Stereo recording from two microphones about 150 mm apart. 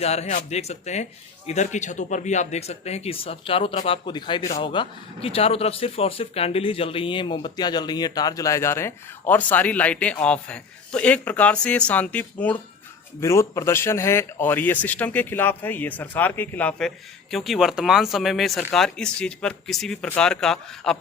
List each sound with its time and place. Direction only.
0.0 s a man's voice: 45° left (ahead or behind); by 21.0 s 5° left (ahead or behind)